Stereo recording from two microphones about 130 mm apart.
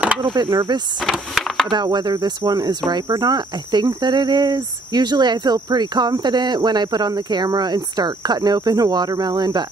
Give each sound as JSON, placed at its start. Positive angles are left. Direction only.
{"t": 0.2, "sound": "speech", "side_deg": -35}
{"t": 1.0, "sound": "a sound", "side_deg": 0}
{"t": 1.7, "sound": "speech", "side_deg": -35}